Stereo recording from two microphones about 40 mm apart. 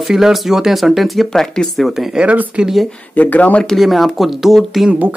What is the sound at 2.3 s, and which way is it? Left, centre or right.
Speech, right.